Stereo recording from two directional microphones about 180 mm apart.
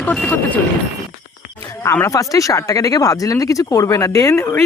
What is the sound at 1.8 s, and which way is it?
Speech, 15° left (ahead or behind).